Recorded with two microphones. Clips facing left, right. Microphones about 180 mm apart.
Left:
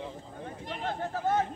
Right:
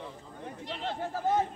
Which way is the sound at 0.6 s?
50° left (ahead or behind).